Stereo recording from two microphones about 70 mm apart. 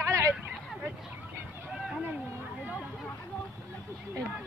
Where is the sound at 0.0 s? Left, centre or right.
Right.